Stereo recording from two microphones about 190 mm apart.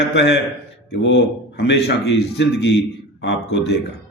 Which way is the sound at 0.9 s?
65° left (ahead or behind).